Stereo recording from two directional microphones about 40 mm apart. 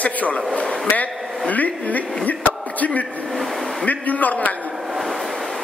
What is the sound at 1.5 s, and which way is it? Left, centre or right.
A man's voice, left.